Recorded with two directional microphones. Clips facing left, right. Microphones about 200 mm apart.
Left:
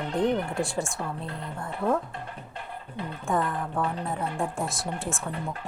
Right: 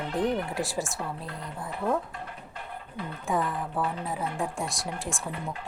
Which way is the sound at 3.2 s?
Centre (ahead or behind).